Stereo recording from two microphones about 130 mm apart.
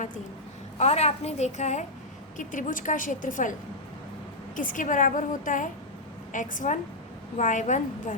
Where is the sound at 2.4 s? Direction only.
85° left.